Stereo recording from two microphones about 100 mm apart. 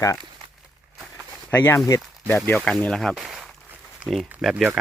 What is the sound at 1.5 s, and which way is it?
Speech, 20° left (ahead or behind).